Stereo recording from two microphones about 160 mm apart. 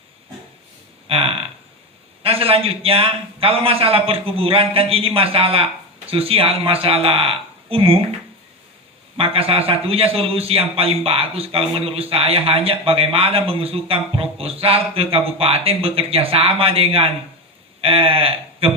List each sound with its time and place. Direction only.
1.0 s a sound: 35° right (ahead or behind)
2.2 s a man's voice: 35° right (ahead or behind)
9.1 s a man's voice: 35° right (ahead or behind)